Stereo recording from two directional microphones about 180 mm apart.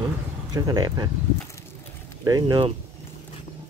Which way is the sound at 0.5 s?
20° right (ahead or behind).